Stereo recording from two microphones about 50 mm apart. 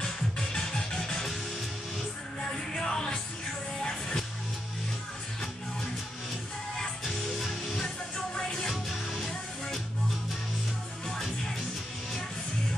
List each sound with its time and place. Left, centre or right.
0.0 s music: centre
2.4 s music: centre
6.8 s music: centre
8.4 s music: centre
8.6 s music: centre
11.1 s music: centre